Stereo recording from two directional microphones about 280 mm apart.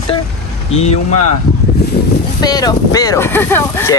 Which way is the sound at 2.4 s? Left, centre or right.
Centre.